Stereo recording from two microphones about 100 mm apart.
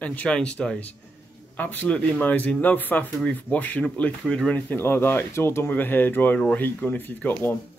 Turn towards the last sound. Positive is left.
turn(degrees=20)  # may be behind; listen again after turning